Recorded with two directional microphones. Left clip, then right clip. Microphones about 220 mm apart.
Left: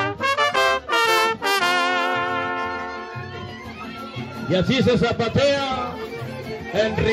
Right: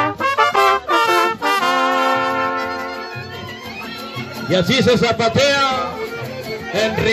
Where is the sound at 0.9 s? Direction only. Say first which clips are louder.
Right 4 dB; 40° left (ahead or behind).